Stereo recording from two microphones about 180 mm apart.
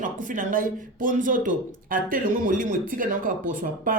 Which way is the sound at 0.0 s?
45° right (ahead or behind).